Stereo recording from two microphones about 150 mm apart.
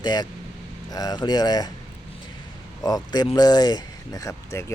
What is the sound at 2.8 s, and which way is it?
Speech, 25° left (ahead or behind).